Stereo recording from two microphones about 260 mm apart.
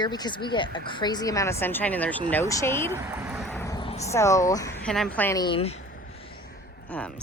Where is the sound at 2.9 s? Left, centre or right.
Centre.